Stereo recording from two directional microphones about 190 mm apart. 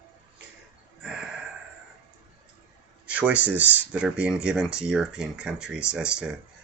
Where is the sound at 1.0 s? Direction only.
5° right (ahead or behind).